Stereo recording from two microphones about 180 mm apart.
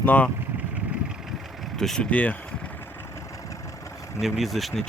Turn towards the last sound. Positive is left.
turn(degrees=0)  # may be behind; listen again after turning